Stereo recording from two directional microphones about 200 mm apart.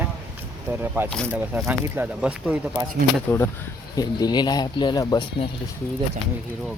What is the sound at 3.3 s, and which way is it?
Speech, 10° left (ahead or behind).